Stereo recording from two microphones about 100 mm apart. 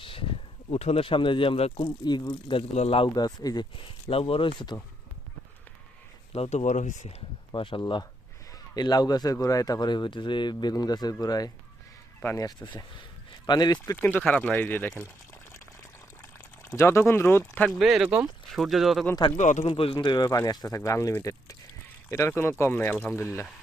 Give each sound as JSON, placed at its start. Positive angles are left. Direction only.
{"t": 0.0, "sound": "a sound", "side_deg": 60}
{"t": 0.7, "sound": "speech", "side_deg": 90}
{"t": 1.8, "sound": "speech", "side_deg": 50}
{"t": 3.2, "sound": "speech", "side_deg": 40}
{"t": 6.3, "sound": "speech", "side_deg": 90}
{"t": 7.5, "sound": "speech", "side_deg": 55}
{"t": 8.7, "sound": "speech", "side_deg": 45}
{"t": 13.8, "sound": "speech", "side_deg": 25}
{"t": 16.6, "sound": "speech", "side_deg": 25}
{"t": 17.7, "sound": "speech", "side_deg": -5}
{"t": 19.2, "sound": "speech", "side_deg": 65}
{"t": 20.0, "sound": "speech", "side_deg": 45}